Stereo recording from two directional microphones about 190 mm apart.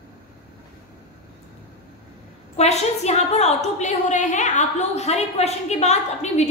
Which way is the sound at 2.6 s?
35° left (ahead or behind).